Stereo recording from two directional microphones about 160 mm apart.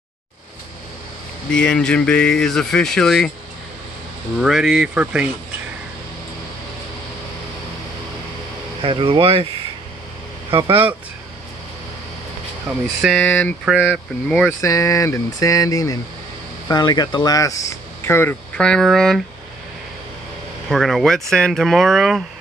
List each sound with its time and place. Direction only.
1.5 s speech: 5° left (ahead or behind)
4.4 s speech: centre (ahead or behind)
8.8 s speech: 30° right (ahead or behind)
10.5 s speech: 35° right (ahead or behind)
12.7 s speech: 5° right (ahead or behind)
13.0 s speech: 5° left (ahead or behind)
13.7 s speech: centre (ahead or behind)
14.6 s speech: 20° left (ahead or behind); by 19.2 s centre (ahead or behind)
20.7 s speech: centre (ahead or behind)